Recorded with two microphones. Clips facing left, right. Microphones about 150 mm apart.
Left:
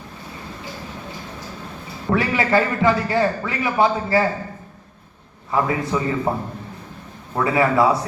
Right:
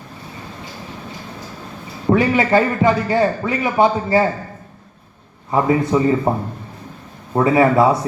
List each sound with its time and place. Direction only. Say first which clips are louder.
2.0 s a man's voice: right 5 dB; 20° right (ahead or behind)
5.5 s a man's voice: right 5 dB; 25° right (ahead or behind)
7.3 s a man's voice: right 4 dB; 25° right (ahead or behind)